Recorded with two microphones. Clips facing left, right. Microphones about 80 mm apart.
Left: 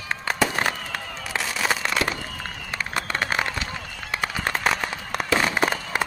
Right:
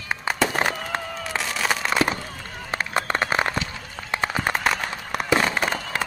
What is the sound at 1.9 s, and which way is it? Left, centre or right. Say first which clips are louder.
Fireworks: right 3 dB; right.